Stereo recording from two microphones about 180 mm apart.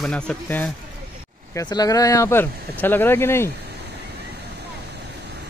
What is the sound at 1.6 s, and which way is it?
Speech, 20° left (ahead or behind).